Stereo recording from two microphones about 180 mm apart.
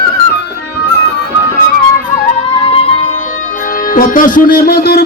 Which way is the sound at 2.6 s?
30° left (ahead or behind).